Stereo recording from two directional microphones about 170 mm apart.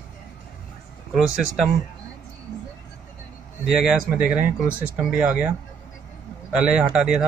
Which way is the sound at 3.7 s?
5° right (ahead or behind).